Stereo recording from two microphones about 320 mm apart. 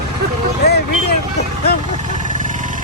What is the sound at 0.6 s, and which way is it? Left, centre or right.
Speech, left.